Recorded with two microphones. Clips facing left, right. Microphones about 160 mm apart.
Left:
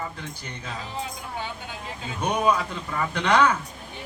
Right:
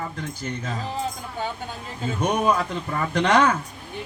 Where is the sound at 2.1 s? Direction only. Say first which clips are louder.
Right 2 dB; 40° right (ahead or behind).